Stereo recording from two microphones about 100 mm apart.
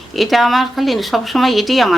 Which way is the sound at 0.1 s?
Centre (ahead or behind).